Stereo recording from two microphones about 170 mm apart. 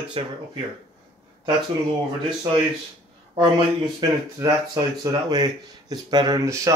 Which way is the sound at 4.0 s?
20° right (ahead or behind).